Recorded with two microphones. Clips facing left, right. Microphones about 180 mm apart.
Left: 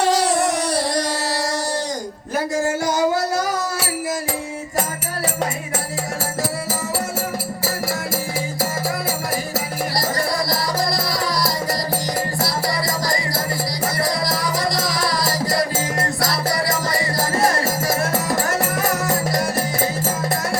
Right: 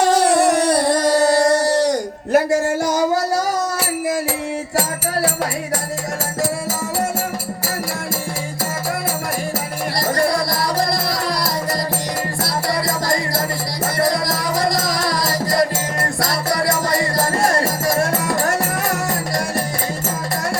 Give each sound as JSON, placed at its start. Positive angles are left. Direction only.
{"t": 0.1, "sound": "a sound", "side_deg": -60}
{"t": 10.2, "sound": "music", "side_deg": -55}
{"t": 14.0, "sound": "music", "side_deg": -50}